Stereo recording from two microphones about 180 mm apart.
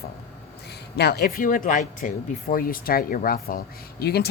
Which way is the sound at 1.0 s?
65° left (ahead or behind).